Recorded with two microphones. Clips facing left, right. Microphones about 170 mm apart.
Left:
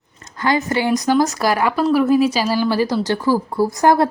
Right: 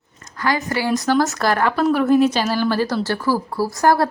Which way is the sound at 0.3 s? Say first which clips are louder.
Left 3 dB; 20° left (ahead or behind).